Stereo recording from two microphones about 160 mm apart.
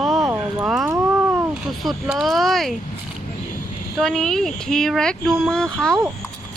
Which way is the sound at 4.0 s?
5° left (ahead or behind).